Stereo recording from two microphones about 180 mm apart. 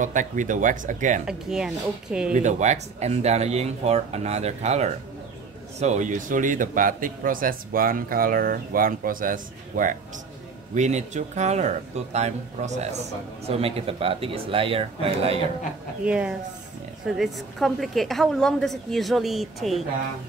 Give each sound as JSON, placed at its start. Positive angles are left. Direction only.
{"t": 0.0, "sound": "a man's voice", "side_deg": -45}
{"t": 1.2, "sound": "a woman's voice", "side_deg": -5}
{"t": 2.3, "sound": "a man's voice", "side_deg": -40}
{"t": 16.1, "sound": "a woman's voice", "side_deg": -5}